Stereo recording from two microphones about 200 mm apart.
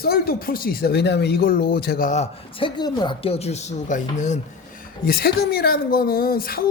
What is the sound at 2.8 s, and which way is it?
Speech, 20° left (ahead or behind).